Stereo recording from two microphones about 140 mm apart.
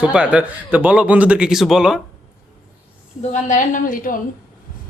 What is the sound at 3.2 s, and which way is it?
A woman's voice, 60° left (ahead or behind).